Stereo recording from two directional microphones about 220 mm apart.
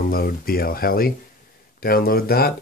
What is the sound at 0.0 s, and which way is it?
Speech, 40° left (ahead or behind).